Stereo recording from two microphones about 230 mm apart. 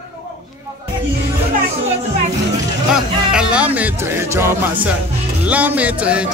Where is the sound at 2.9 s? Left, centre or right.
Centre.